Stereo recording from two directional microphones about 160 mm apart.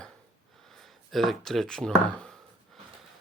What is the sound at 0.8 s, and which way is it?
Speech, centre (ahead or behind).